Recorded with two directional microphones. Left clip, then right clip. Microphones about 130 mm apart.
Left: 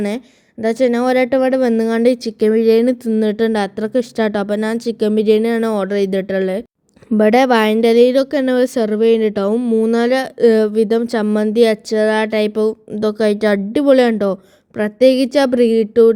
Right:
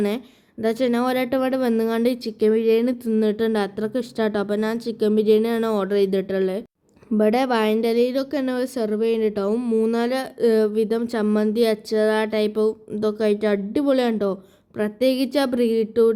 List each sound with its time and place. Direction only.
0.6 s speech: 35° left (ahead or behind)
9.6 s speech: 30° left (ahead or behind)